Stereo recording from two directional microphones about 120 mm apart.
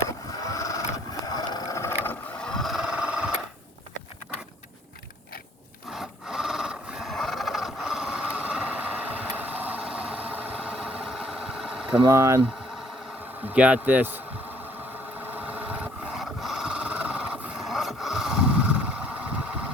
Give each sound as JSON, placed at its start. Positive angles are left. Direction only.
{"t": 0.4, "sound": "vehicle", "side_deg": 30}
{"t": 1.2, "sound": "a sound", "side_deg": 30}
{"t": 2.4, "sound": "a sound", "side_deg": 5}
{"t": 5.9, "sound": "filing", "side_deg": -5}
{"t": 12.1, "sound": "speech", "side_deg": -20}
{"t": 13.4, "sound": "speech", "side_deg": -10}
{"t": 15.2, "sound": "vehicle", "side_deg": -15}
{"t": 16.2, "sound": "wood", "side_deg": 0}